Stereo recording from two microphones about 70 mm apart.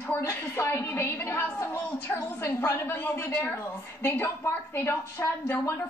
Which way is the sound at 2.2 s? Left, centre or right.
Left.